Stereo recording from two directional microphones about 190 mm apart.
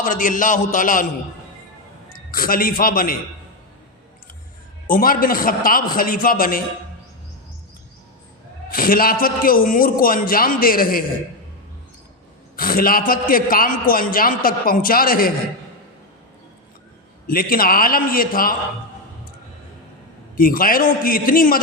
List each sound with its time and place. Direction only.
0.0 s a man's voice: 45° left (ahead or behind)
2.1 s a man's voice: 50° left (ahead or behind)
4.9 s a man's voice: 50° left (ahead or behind)
8.7 s a man's voice: 50° left (ahead or behind)
12.5 s a man's voice: 50° left (ahead or behind)
17.2 s a man's voice: 50° left (ahead or behind)
20.3 s a man's voice: 50° left (ahead or behind)